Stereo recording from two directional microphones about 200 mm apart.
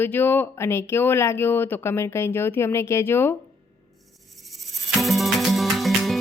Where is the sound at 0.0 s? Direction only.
10° left (ahead or behind).